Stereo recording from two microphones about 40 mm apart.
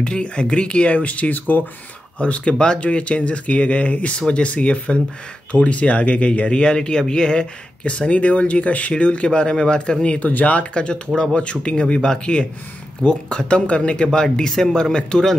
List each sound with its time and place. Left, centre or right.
0.0 s speech: left
1.5 s speech: left
2.1 s speech: left
10.2 s speech: left
10.7 s speech: left